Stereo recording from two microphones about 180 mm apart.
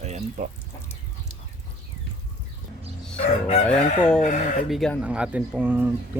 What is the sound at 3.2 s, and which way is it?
Crowing, 35° left (ahead or behind).